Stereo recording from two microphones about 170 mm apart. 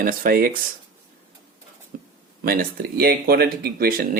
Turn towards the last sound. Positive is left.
turn(degrees=-60)  # may be behind; listen again after turning